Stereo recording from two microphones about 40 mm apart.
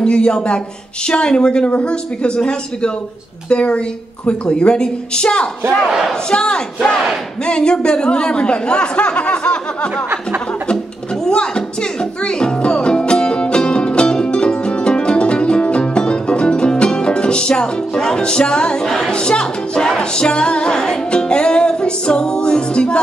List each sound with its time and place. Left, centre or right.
0.0 s speech: left
5.9 s speech: centre
6.3 s speech: left
11.2 s music: left
18.9 s speech: centre
19.1 s speech: left